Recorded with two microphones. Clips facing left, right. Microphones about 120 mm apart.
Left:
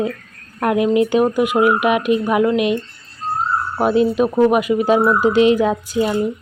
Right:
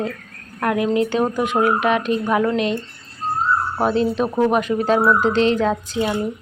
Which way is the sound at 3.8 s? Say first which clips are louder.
Left 5 dB; 10° left (ahead or behind).